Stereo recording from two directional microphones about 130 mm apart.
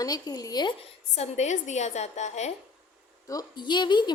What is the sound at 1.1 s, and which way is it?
A woman's voice, 55° left (ahead or behind).